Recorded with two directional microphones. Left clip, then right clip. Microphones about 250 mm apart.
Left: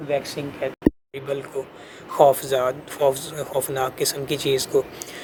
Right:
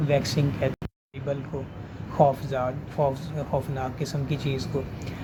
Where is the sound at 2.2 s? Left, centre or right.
Left.